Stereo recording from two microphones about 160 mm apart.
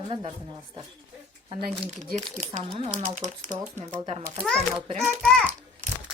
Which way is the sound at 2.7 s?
40° right (ahead or behind).